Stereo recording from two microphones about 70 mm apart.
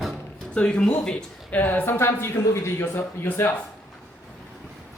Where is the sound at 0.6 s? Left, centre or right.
Centre.